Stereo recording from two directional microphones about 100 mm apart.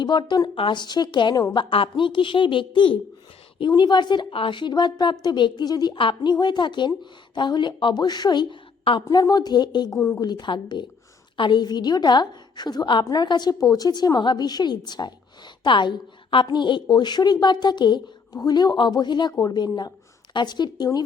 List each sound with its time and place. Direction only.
0.0 s a woman's voice: 50° left (ahead or behind)
1.5 s a woman's voice: 60° left (ahead or behind); by 6.0 s 40° left (ahead or behind)
6.0 s a woman's voice: 55° left (ahead or behind)
9.0 s a woman's voice: 40° left (ahead or behind)